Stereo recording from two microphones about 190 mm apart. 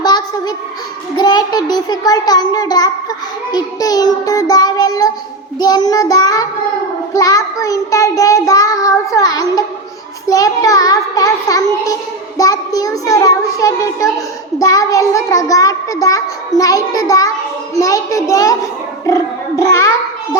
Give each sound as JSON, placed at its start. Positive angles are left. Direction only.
{"t": 0.0, "sound": "a sound", "side_deg": 20}
{"t": 1.1, "sound": "child singing", "side_deg": 20}
{"t": 7.1, "sound": "a child's voice", "side_deg": 20}
{"t": 10.2, "sound": "child singing", "side_deg": 20}
{"t": 12.4, "sound": "a child's voice", "side_deg": 20}